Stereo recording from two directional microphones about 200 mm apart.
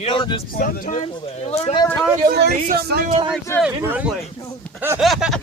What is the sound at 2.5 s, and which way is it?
Speech, 35° right (ahead or behind).